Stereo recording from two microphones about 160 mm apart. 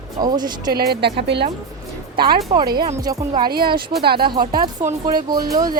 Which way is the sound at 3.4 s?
70° right (ahead or behind).